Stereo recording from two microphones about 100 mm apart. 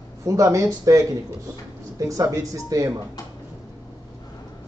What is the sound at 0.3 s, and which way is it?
A man's voice, 30° right (ahead or behind).